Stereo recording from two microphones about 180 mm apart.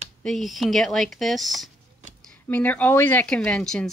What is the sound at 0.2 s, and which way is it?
Speech, centre (ahead or behind).